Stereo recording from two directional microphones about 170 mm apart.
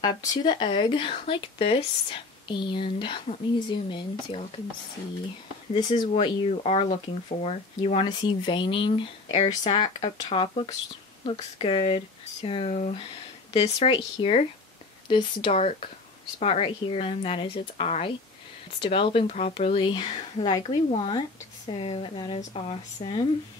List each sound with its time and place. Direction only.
0.3 s speech: 25° left (ahead or behind)
5.7 s speech: 30° left (ahead or behind)
22.4 s speech: 40° left (ahead or behind)